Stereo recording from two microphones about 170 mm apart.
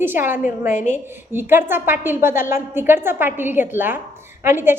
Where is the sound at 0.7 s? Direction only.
45° left (ahead or behind).